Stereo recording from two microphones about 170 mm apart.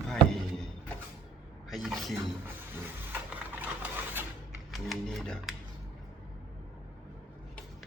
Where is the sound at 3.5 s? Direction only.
10° right (ahead or behind).